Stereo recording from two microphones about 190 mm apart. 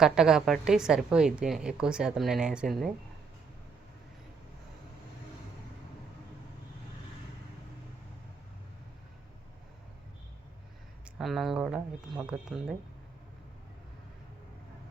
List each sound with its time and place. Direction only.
0.0 s a woman's voice: 5° right (ahead or behind)
11.2 s a woman's voice: centre (ahead or behind)